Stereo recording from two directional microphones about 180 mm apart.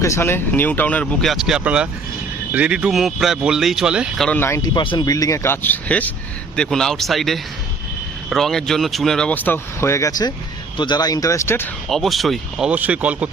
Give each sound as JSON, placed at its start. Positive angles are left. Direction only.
{"t": 0.0, "sound": "speech", "side_deg": 15}
{"t": 4.3, "sound": "speech", "side_deg": 10}
{"t": 11.9, "sound": "speech", "side_deg": 0}